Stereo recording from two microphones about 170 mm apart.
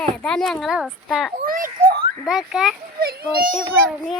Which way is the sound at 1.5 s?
55° right (ahead or behind).